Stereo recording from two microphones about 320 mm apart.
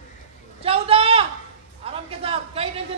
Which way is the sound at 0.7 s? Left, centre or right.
Centre.